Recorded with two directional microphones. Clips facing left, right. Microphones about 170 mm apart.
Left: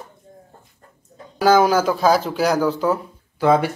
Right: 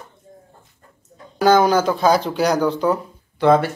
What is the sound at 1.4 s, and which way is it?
Speech, 5° left (ahead or behind).